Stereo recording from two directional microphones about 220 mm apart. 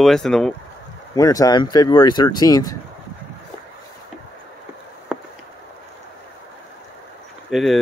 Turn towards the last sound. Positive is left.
turn(degrees=0)  # may be behind; listen again after turning